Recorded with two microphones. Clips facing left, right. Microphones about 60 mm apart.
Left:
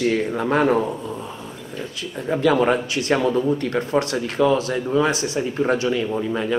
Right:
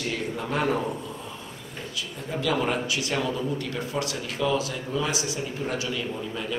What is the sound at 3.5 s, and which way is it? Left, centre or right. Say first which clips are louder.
Speech: left 9 dB; left.